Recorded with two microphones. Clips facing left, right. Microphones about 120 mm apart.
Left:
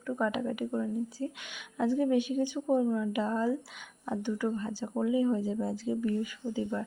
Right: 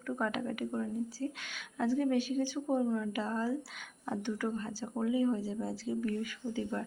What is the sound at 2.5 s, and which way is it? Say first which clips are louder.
Speech: left 5 dB; 5° left (ahead or behind).